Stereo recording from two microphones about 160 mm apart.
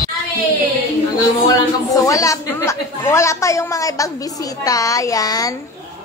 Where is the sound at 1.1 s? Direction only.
25° left (ahead or behind).